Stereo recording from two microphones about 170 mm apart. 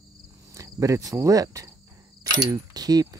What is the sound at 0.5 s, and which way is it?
Speech, 20° right (ahead or behind).